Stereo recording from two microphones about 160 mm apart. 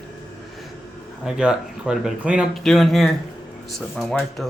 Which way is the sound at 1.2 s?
5° right (ahead or behind).